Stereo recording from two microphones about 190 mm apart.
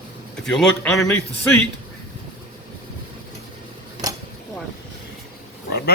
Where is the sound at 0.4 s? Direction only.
5° left (ahead or behind).